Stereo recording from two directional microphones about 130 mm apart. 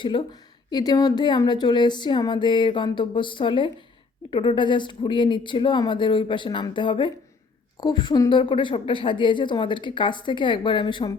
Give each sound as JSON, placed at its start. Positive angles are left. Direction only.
{"t": 0.0, "sound": "a woman's voice", "side_deg": 40}